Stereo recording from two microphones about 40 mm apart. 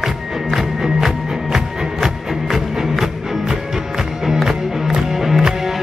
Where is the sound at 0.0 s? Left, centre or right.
Centre.